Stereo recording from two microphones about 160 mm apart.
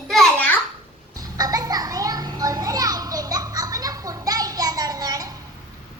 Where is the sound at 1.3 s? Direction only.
20° right (ahead or behind).